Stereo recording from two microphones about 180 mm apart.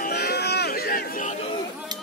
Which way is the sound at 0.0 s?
65° left (ahead or behind).